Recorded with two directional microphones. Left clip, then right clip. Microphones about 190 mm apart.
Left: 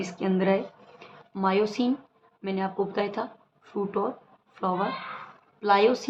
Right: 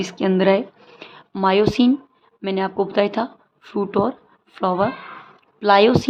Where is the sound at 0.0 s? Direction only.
50° right (ahead or behind).